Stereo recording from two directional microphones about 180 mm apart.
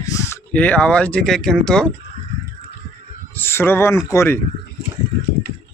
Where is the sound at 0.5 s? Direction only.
10° left (ahead or behind).